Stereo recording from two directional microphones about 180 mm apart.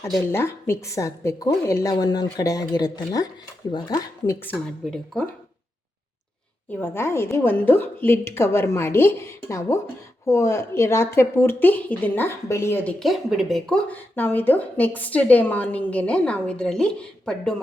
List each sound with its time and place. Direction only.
0.3 s a woman's voice: 15° left (ahead or behind)
4.4 s a woman's voice: 5° left (ahead or behind)
6.7 s a woman's voice: 10° left (ahead or behind)